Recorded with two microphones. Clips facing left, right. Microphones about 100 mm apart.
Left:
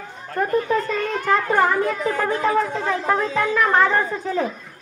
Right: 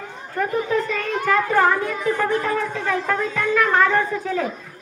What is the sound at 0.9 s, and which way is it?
Speech, 30° left (ahead or behind).